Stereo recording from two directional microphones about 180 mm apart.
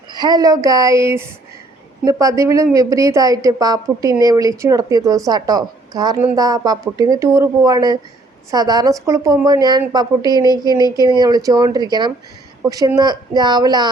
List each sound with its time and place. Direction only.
0.1 s a woman's voice: 20° right (ahead or behind)